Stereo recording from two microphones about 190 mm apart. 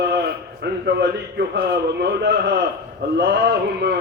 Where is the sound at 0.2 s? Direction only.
60° right (ahead or behind).